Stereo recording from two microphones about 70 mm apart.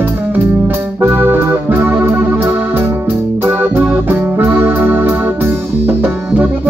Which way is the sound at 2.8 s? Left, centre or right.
Right.